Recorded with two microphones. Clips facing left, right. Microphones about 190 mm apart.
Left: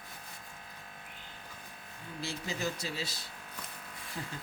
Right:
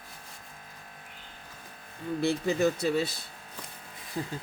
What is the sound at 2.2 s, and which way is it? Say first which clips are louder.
Speech: right 11 dB; 60° right (ahead or behind).